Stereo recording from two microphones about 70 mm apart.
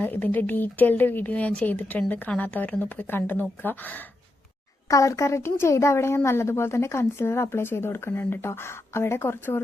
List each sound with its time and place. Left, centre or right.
0.0 s speech: left
4.9 s speech: left